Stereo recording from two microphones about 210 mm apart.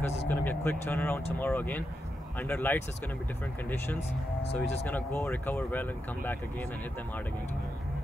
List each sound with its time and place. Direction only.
0.3 s speech: 10° left (ahead or behind)
4.4 s speech: 30° left (ahead or behind)
4.8 s speech: 10° left (ahead or behind)